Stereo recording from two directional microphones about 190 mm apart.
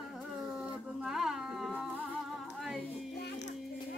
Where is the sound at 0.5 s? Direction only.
5° right (ahead or behind).